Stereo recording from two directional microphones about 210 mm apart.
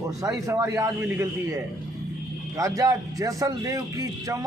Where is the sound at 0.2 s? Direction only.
15° right (ahead or behind).